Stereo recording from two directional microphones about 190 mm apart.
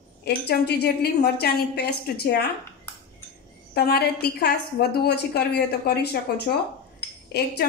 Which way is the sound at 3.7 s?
55° left (ahead or behind).